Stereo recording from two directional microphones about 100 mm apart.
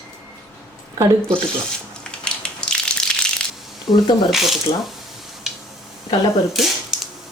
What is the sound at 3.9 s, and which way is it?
Speech, 35° left (ahead or behind).